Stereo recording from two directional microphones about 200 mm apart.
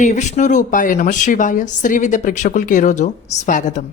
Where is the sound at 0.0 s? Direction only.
35° left (ahead or behind).